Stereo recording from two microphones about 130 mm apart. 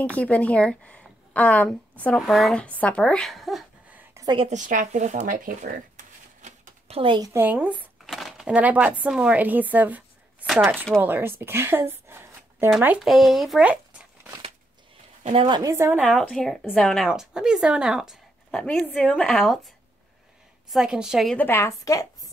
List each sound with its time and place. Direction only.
0.0 s a woman's voice: 10° left (ahead or behind)
4.5 s speech: 80° right
6.9 s a woman's voice: 40° right (ahead or behind)
7.3 s speech: 15° right (ahead or behind)
8.1 s speech: centre (ahead or behind); by 12.6 s 20° right (ahead or behind)
13.0 s speech: centre (ahead or behind)
15.3 s a woman's voice: 35° right (ahead or behind)
15.7 s speech: 15° right (ahead or behind)
16.1 s speech: centre (ahead or behind)
18.5 s a woman's voice: 5° left (ahead or behind)
20.7 s speech: 5° right (ahead or behind)
21.4 s a woman's voice: 20° left (ahead or behind)